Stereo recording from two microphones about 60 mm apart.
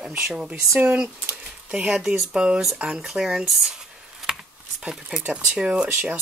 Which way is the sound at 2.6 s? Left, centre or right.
Centre.